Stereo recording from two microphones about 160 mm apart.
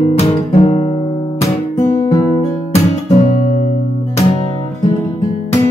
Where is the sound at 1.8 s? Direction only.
20° left (ahead or behind).